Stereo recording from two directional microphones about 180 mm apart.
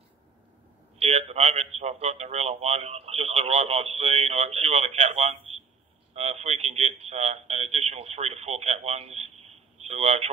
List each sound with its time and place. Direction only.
0.9 s a man's voice: 35° right (ahead or behind)